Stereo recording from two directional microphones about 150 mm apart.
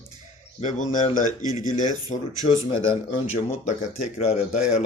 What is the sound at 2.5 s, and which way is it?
Speech, 35° left (ahead or behind).